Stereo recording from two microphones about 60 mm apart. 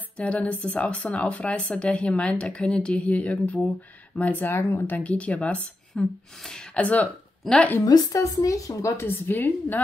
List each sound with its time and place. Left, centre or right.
0.2 s speech: left
6.4 s speech: centre
6.8 s speech: left
7.4 s speech: centre
7.8 s a woman's voice: left
8.9 s a woman's voice: left